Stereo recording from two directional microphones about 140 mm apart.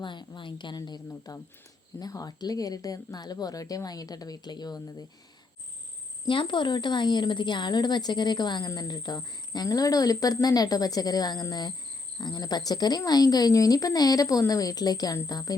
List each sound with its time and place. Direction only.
0.0 s a woman's voice: 35° left (ahead or behind)
6.2 s a woman's voice: 35° left (ahead or behind)